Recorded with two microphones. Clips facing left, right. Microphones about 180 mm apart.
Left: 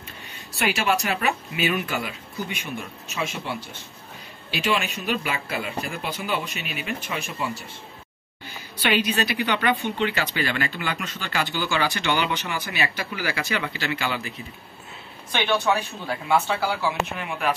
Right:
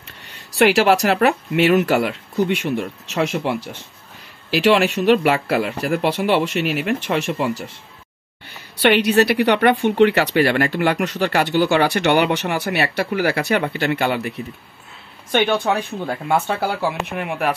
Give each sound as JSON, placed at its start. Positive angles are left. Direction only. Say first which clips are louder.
{"t": 0.3, "sound": "speech", "louder": "right 11 dB", "side_deg": -75}
{"t": 4.6, "sound": "a woman's voice", "louder": "right 10 dB", "side_deg": -75}
{"t": 15.3, "sound": "a woman's voice", "louder": "right 5 dB", "side_deg": -50}